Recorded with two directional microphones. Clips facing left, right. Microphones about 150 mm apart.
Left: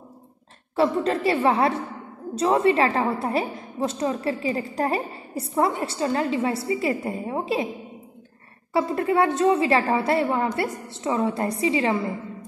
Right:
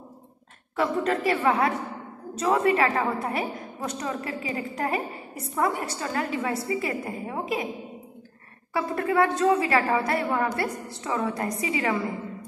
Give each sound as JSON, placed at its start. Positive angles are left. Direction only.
{"t": 0.7, "sound": "a woman's voice", "side_deg": 30}
{"t": 8.7, "sound": "a woman's voice", "side_deg": 25}